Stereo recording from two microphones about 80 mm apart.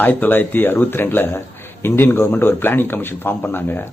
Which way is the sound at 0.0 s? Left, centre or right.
Left.